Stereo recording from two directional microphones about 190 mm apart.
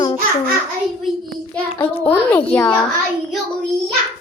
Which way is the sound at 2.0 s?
10° left (ahead or behind).